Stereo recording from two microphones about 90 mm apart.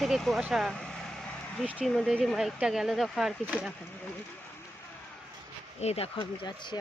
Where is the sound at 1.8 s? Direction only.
Centre (ahead or behind).